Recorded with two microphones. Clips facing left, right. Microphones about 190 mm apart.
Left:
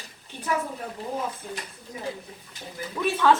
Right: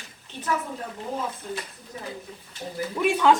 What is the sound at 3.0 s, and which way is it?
Speech, 15° right (ahead or behind).